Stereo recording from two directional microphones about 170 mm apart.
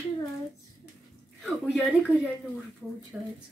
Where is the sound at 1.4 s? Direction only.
Centre (ahead or behind).